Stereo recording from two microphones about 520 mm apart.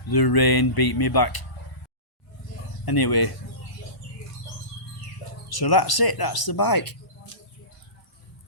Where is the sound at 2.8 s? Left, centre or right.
Left.